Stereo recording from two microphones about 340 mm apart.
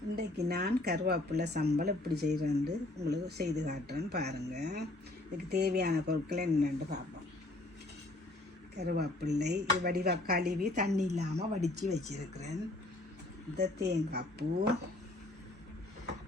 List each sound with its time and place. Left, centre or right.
0.2 s speech: right
8.7 s speech: right
13.6 s speech: right